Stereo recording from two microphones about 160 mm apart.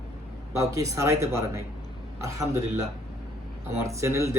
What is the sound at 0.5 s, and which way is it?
Speech, 20° right (ahead or behind).